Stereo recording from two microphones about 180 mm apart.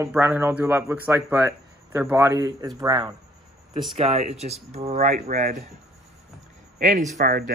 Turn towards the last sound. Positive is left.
turn(degrees=-50)  # may be behind; listen again after turning